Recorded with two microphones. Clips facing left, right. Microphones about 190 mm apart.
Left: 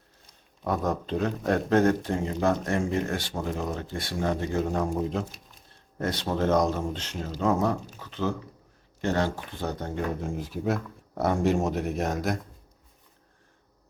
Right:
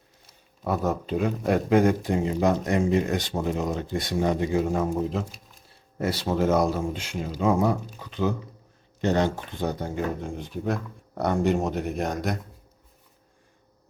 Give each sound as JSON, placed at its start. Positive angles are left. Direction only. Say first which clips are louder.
{"t": 0.3, "sound": "speech", "louder": "right 1 dB", "side_deg": -5}
{"t": 10.2, "sound": "speech", "louder": "left 1 dB", "side_deg": 0}